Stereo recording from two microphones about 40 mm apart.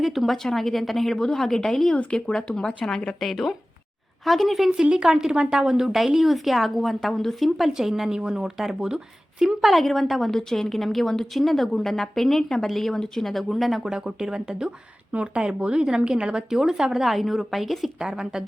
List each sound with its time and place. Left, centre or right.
0.0 s a woman's voice: centre
2.0 s speech: left
3.2 s a woman's voice: centre
4.7 s a woman's voice: centre
7.7 s a woman's voice: centre
9.6 s a woman's voice: centre
13.3 s a woman's voice: centre
13.8 s a woman's voice: centre
15.1 s a woman's voice: right; by 17.9 s centre
18.0 s a woman's voice: centre